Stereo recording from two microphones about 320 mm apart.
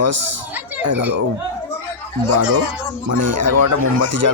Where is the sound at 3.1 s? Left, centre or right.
Right.